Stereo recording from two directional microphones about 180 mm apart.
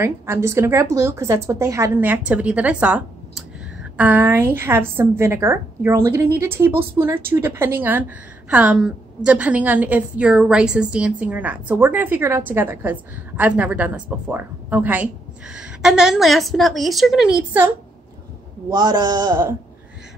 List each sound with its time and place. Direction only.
0.0 s a woman's voice: 15° right (ahead or behind)
18.7 s a man's voice: 25° right (ahead or behind)